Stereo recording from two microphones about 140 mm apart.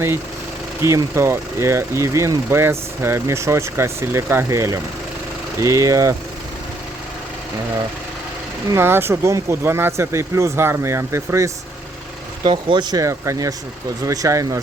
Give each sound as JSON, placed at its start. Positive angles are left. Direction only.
{"t": 0.8, "sound": "speech", "side_deg": -20}
{"t": 8.7, "sound": "speech", "side_deg": -15}
{"t": 12.4, "sound": "speech", "side_deg": -35}